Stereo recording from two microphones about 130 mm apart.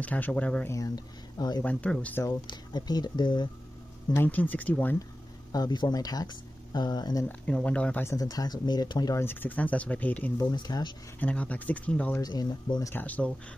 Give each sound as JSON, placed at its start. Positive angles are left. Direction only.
{"t": 0.0, "sound": "speech", "side_deg": 10}
{"t": 0.7, "sound": "speech", "side_deg": 30}
{"t": 1.6, "sound": "speech", "side_deg": 10}
{"t": 2.2, "sound": "speech", "side_deg": 35}
{"t": 4.1, "sound": "speech", "side_deg": 15}
{"t": 5.5, "sound": "speech", "side_deg": 30}
{"t": 7.2, "sound": "speech", "side_deg": 10}
{"t": 8.2, "sound": "speech", "side_deg": 30}
{"t": 9.2, "sound": "speech", "side_deg": 15}
{"t": 10.5, "sound": "speech", "side_deg": 35}
{"t": 11.1, "sound": "speech", "side_deg": 10}
{"t": 12.2, "sound": "speech", "side_deg": 30}
{"t": 12.9, "sound": "speech", "side_deg": 10}